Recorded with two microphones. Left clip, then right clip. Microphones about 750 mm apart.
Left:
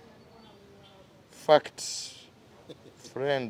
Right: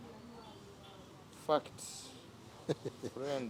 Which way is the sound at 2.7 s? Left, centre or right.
Right.